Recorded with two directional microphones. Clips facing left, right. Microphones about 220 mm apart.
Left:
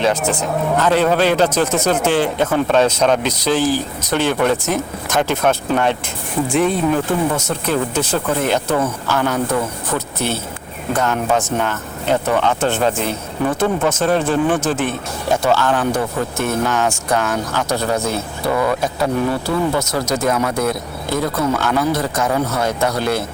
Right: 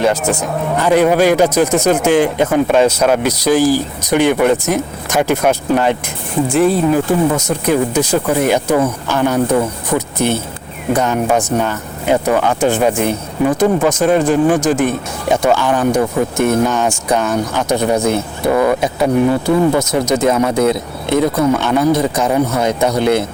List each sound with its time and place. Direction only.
0.0 s speech: 10° right (ahead or behind)